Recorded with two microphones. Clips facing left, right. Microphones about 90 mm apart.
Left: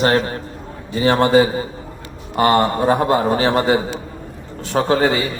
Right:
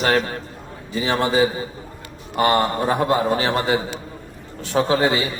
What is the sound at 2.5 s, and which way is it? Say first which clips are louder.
A man's voice: left 4 dB; 25° left (ahead or behind).